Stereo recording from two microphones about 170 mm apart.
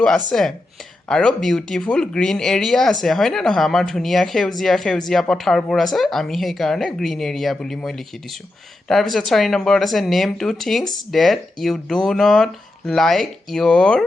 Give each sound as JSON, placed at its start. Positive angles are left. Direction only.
{"t": 0.3, "sound": "speech", "side_deg": 0}